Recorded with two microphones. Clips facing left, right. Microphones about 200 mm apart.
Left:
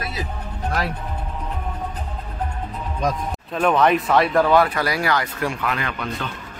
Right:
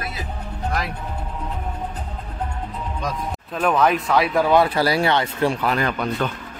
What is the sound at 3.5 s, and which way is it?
Speech, centre (ahead or behind).